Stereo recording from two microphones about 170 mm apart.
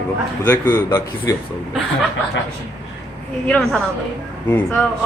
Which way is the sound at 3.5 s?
5° left (ahead or behind).